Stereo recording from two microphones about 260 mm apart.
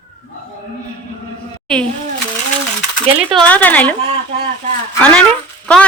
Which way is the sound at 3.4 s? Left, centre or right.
Centre.